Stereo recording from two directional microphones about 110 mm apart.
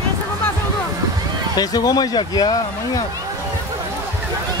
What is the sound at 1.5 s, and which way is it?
Speech, 35° left (ahead or behind).